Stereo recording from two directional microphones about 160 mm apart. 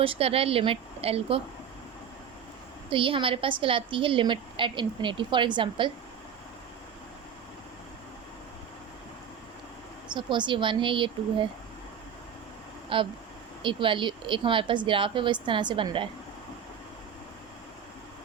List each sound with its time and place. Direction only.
0.0 s a woman's voice: 35° right (ahead or behind)
2.9 s a woman's voice: 30° right (ahead or behind)
10.1 s a woman's voice: 30° right (ahead or behind)
12.9 s a woman's voice: 30° right (ahead or behind)